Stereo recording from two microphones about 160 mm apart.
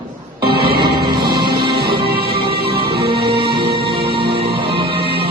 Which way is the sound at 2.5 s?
75° right (ahead or behind).